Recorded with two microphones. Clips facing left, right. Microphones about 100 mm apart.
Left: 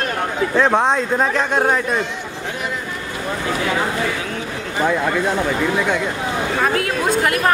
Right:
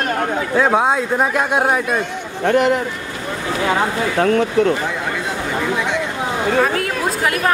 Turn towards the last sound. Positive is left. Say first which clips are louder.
# left 1 dB
turn(degrees=0)  # may be behind; listen again after turning